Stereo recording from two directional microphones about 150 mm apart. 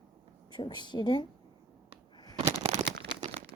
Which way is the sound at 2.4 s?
45° right (ahead or behind).